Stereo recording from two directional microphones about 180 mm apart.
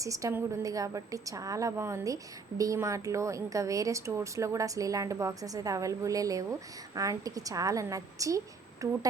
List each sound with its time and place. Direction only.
0.0 s a woman's voice: 15° right (ahead or behind)